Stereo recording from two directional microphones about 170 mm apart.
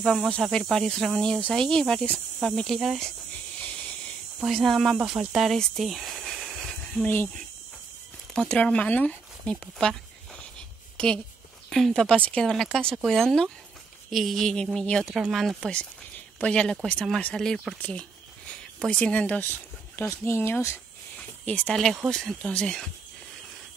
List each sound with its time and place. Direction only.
0.0 s speech: centre (ahead or behind)
3.6 s hiss: 5° left (ahead or behind)
4.4 s speech: centre (ahead or behind)
11.7 s speech: centre (ahead or behind)